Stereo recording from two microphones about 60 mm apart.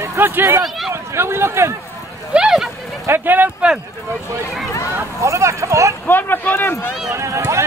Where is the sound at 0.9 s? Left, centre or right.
Right.